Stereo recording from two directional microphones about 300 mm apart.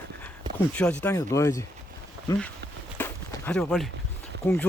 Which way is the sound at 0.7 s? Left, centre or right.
Centre.